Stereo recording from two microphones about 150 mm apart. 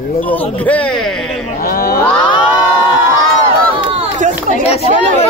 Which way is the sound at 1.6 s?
80° left.